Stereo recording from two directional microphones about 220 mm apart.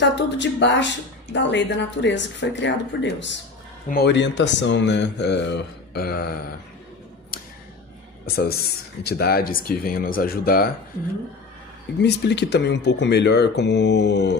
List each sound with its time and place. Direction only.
0.0 s speech: 55° left (ahead or behind)
9.0 s speech: 45° left (ahead or behind)
12.0 s speech: 50° left (ahead or behind)